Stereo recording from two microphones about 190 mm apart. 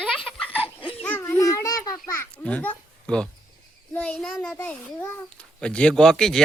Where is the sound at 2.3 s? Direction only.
10° left (ahead or behind).